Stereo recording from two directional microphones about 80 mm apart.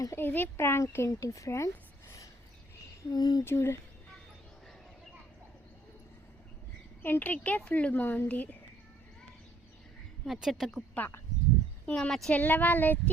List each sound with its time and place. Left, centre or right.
0.2 s a child's voice: left
3.1 s speech: left
3.4 s speech: left
7.0 s a woman's voice: left
10.3 s a woman's voice: centre
11.0 s a woman's voice: centre
12.3 s a woman's voice: left